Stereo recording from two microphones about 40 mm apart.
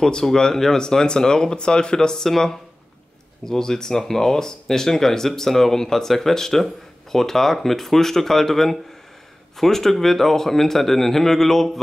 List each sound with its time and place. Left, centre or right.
0.0 s speech: centre